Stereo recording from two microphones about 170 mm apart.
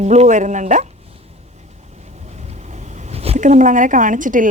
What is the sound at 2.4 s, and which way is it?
A woman's voice, 40° right (ahead or behind).